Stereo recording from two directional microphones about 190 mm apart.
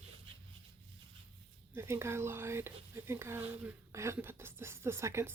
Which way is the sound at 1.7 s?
15° right (ahead or behind).